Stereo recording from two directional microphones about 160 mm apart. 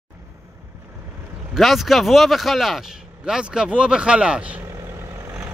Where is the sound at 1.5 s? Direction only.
Centre (ahead or behind).